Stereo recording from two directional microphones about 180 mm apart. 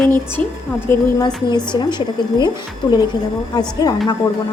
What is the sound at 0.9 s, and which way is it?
Speech, 10° left (ahead or behind).